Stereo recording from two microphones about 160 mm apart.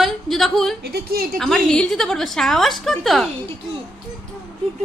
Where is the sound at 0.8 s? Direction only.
80° right.